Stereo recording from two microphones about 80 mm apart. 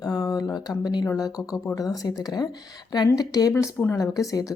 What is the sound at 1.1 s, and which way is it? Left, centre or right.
A woman's voice, left.